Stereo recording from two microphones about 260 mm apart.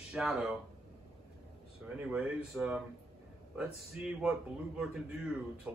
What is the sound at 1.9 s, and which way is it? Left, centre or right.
A man's voice, centre.